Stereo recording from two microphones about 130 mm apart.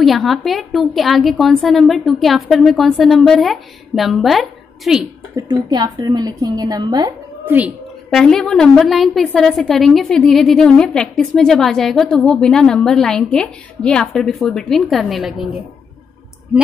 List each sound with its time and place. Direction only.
0.0 s a woman's voice: centre (ahead or behind)
5.3 s a woman's voice: 30° right (ahead or behind)
7.4 s speech: 15° right (ahead or behind)
8.1 s a woman's voice: 5° left (ahead or behind)